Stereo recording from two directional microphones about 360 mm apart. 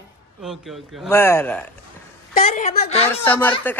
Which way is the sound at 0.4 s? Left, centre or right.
Centre.